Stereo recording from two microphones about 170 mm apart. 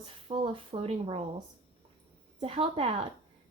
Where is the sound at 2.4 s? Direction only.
30° right (ahead or behind).